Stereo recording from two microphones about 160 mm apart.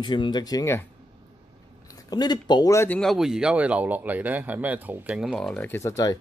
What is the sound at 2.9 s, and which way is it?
Speech, centre (ahead or behind).